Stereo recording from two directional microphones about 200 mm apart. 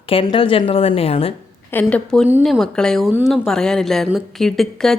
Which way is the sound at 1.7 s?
5° left (ahead or behind).